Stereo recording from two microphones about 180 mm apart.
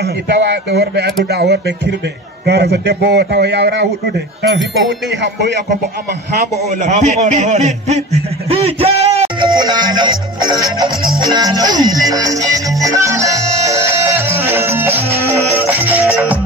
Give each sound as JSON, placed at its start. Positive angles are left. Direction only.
{"t": 0.0, "sound": "a man's voice", "side_deg": -70}
{"t": 6.7, "sound": "a man's voice", "side_deg": -40}
{"t": 9.6, "sound": "music", "side_deg": -25}